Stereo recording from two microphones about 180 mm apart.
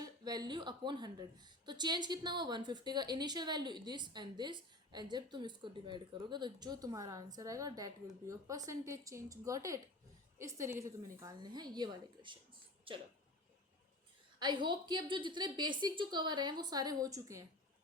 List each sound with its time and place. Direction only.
0.0 s a woman's voice: 20° right (ahead or behind)
14.3 s a woman's voice: 25° right (ahead or behind)